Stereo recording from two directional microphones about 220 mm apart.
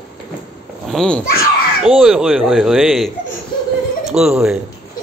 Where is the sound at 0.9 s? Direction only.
5° left (ahead or behind).